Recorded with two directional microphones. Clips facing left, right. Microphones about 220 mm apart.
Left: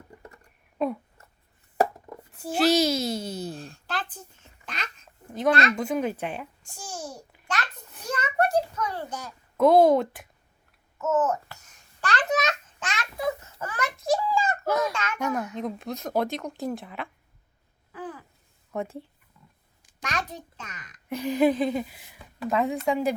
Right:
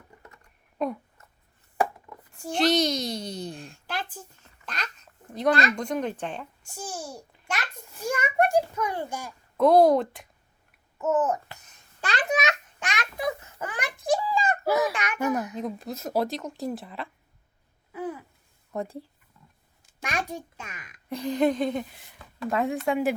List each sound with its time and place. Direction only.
2.3 s a woman's voice: 5° left (ahead or behind)
5.3 s a woman's voice: centre (ahead or behind)
7.4 s a sound: 10° right (ahead or behind)
9.6 s a woman's voice: centre (ahead or behind)
10.9 s babbling: 15° right (ahead or behind)
14.0 s a sound: 15° right (ahead or behind)
14.7 s speech: 5° right (ahead or behind)
14.9 s a child's voice: 15° right (ahead or behind)
15.5 s a woman's voice: centre (ahead or behind)
17.9 s a sound: 10° right (ahead or behind)
18.7 s a woman's voice: centre (ahead or behind)
20.0 s a child's voice: 10° right (ahead or behind)
21.1 s a woman's voice: 5° left (ahead or behind)